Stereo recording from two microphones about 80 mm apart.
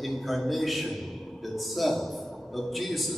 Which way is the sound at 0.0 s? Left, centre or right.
Centre.